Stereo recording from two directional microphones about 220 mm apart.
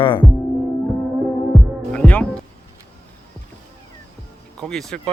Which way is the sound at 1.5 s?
5° left (ahead or behind).